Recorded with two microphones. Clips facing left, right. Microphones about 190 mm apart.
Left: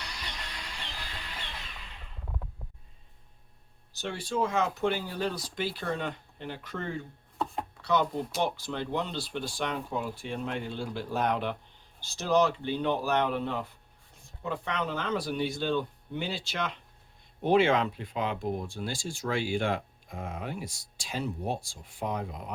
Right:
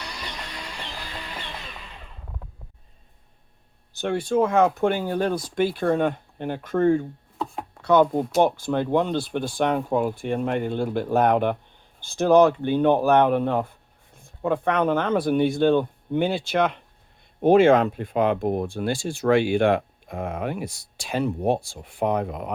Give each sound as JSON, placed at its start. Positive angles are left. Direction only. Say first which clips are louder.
{"t": 0.0, "sound": "music", "louder": "right 6 dB", "side_deg": -75}
{"t": 3.9, "sound": "speech", "louder": "right 10 dB", "side_deg": -55}